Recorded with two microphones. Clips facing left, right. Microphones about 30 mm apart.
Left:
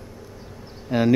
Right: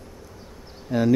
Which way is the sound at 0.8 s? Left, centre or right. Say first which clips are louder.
Left 1 dB; left.